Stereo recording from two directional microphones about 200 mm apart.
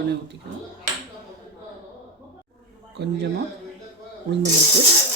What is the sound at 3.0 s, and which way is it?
Speech, 55° right (ahead or behind).